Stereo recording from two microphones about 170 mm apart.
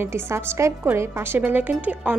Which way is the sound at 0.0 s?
15° right (ahead or behind).